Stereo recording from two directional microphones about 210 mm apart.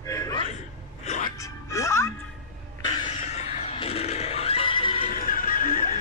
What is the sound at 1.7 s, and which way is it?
Music, 15° left (ahead or behind).